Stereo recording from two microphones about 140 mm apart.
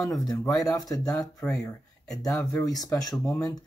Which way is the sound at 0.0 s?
25° left (ahead or behind).